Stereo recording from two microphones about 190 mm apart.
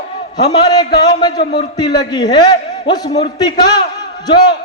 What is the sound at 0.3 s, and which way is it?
A man's voice, 20° left (ahead or behind).